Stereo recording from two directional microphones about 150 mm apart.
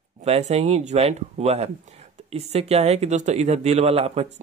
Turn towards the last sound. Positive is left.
turn(degrees=-45)  # may be behind; listen again after turning